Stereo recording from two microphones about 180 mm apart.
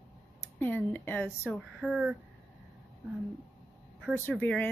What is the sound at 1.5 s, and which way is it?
Speech, 5° right (ahead or behind).